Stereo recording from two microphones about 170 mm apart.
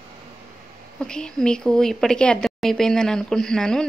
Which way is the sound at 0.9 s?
5° left (ahead or behind).